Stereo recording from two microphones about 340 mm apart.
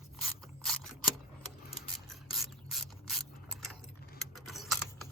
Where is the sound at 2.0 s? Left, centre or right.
Centre.